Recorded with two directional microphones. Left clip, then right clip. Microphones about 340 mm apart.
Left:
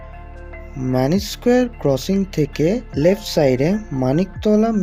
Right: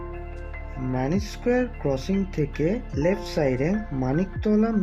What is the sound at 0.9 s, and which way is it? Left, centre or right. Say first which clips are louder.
Speech: left 9 dB; centre.